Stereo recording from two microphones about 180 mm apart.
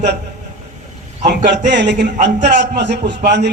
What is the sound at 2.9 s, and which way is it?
Speech, 75° right (ahead or behind).